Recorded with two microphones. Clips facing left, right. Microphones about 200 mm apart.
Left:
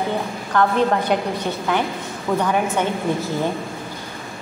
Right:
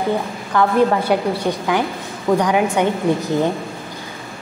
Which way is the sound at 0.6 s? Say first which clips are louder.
Right 3 dB; 10° right (ahead or behind).